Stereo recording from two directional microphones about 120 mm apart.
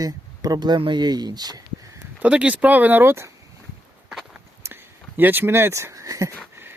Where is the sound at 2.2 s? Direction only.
10° right (ahead or behind).